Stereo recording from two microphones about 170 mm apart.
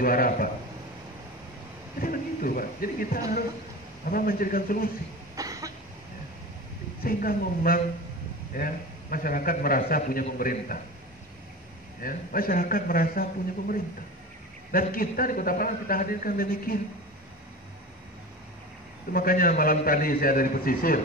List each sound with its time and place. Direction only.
0.0 s a man's voice: 55° left (ahead or behind)
2.0 s a man's voice: 55° left (ahead or behind)
5.3 s cough: 20° right (ahead or behind)
7.0 s a man's voice: 60° left (ahead or behind)
12.0 s a man's voice: 55° left (ahead or behind)
19.1 s a man's voice: 55° left (ahead or behind)